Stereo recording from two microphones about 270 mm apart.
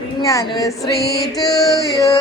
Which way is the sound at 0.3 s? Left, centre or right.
Centre.